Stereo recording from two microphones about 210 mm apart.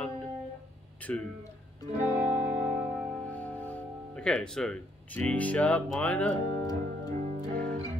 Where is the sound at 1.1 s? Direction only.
5° left (ahead or behind).